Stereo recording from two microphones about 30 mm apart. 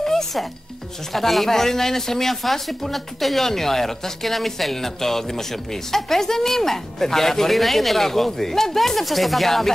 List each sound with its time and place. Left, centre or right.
0.0 s music: centre
1.1 s speech: centre